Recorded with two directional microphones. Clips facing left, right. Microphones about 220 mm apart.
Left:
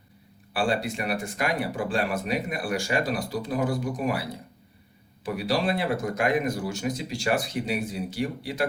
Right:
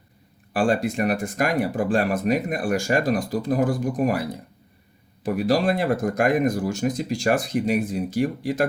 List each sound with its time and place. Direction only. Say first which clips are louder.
0.5 s speech: right 5 dB; 45° right (ahead or behind)